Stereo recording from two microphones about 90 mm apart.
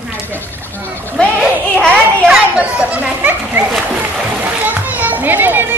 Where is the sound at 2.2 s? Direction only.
10° right (ahead or behind).